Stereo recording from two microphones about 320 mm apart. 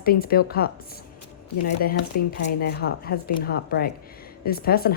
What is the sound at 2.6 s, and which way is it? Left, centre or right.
Speech, left.